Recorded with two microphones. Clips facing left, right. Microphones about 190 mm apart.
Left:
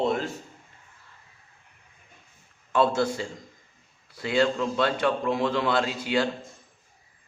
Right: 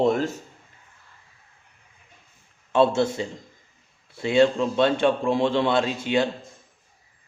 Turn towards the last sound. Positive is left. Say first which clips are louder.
# right 3 dB
turn(degrees=-25)  # may be behind; listen again after turning